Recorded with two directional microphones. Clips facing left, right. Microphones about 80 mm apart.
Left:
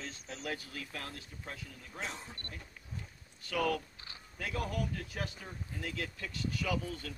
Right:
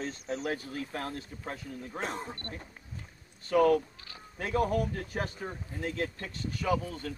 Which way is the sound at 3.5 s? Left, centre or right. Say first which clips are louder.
Right 9 dB; right.